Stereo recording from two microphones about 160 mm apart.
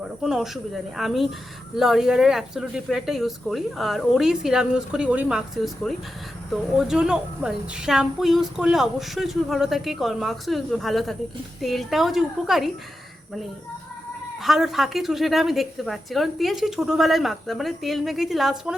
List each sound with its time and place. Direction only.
0.0 s a woman's voice: 5° right (ahead or behind)
14.4 s a woman's voice: centre (ahead or behind)